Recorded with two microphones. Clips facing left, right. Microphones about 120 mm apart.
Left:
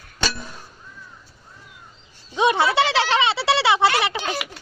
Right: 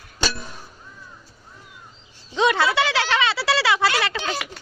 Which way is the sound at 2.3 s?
20° left (ahead or behind).